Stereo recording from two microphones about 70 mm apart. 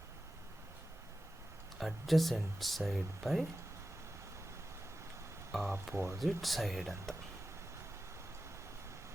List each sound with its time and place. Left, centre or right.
1.8 s speech: centre
5.5 s speech: centre
5.9 s speech: right
6.1 s speech: centre